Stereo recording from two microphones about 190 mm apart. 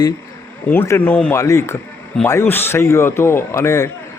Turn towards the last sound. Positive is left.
turn(degrees=15)  # may be behind; listen again after turning